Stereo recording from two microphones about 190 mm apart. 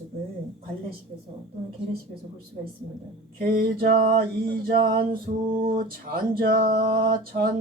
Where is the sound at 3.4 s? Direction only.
55° right (ahead or behind).